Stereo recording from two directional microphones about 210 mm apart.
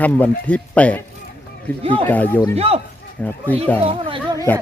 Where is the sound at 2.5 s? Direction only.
30° right (ahead or behind).